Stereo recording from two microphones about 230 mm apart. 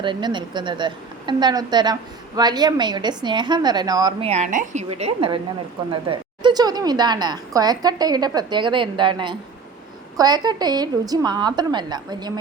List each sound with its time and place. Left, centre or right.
0.0 s a woman's voice: centre